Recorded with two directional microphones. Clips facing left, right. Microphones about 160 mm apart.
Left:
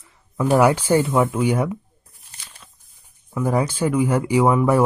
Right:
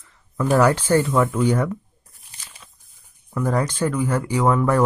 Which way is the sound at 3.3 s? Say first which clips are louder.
Left 1 dB; 10° left (ahead or behind).